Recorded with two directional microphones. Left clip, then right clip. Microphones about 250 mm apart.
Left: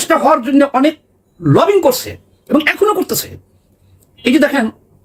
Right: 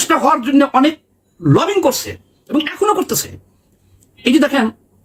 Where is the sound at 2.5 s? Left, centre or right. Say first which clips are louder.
Left 3 dB; centre.